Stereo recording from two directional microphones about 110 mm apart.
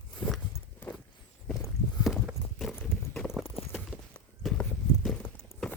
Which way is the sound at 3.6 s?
60° left (ahead or behind).